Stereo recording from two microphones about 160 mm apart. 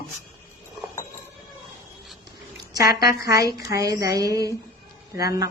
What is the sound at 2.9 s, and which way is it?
Speech, 75° left (ahead or behind).